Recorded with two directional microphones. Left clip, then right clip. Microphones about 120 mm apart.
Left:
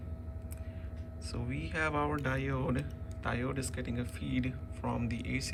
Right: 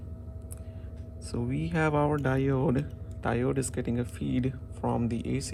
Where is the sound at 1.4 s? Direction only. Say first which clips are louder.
Right 5 dB; 10° right (ahead or behind).